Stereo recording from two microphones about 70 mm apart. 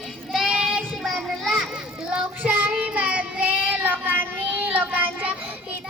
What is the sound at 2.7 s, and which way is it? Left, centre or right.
Child singing, centre.